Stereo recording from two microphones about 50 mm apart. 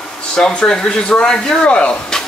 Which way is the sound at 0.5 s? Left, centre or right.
Left.